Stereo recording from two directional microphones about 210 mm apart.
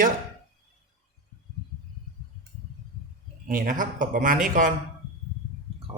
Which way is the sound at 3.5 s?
40° right (ahead or behind).